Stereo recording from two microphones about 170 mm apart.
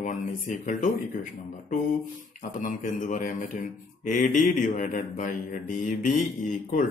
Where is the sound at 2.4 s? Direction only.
50° left (ahead or behind).